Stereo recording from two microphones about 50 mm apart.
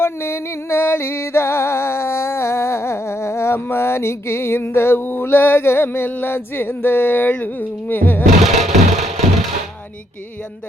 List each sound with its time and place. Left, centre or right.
0.0 s music: left
7.3 s humming: left
8.4 s music: centre